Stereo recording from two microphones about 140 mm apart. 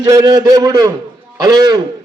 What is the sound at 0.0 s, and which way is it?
A man's voice, 25° right (ahead or behind).